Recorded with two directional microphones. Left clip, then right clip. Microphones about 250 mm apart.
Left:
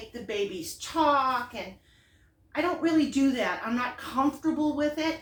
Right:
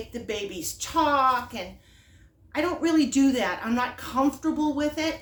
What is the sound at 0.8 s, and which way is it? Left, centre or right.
A woman's voice, right.